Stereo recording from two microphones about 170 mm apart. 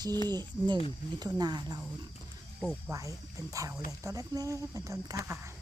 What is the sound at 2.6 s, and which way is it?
Speech, 5° right (ahead or behind).